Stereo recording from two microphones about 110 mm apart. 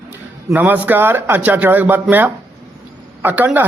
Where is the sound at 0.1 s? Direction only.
15° right (ahead or behind).